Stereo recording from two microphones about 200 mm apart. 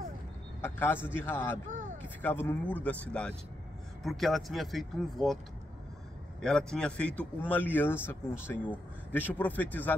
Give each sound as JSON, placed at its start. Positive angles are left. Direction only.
{"t": 0.6, "sound": "a man's voice", "side_deg": 10}
{"t": 1.7, "sound": "a sound", "side_deg": -40}
{"t": 2.2, "sound": "speech", "side_deg": 10}
{"t": 6.4, "sound": "speech", "side_deg": 5}